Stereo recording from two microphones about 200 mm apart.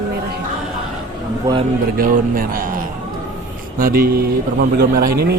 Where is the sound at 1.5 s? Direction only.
15° right (ahead or behind).